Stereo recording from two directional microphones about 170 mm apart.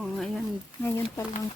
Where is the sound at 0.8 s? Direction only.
15° left (ahead or behind).